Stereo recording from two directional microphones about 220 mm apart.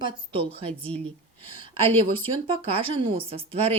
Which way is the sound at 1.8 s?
25° right (ahead or behind).